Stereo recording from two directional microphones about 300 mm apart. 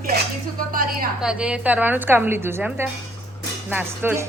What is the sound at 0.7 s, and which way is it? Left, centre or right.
Speech, right.